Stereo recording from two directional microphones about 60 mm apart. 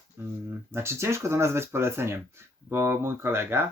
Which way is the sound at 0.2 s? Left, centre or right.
Right.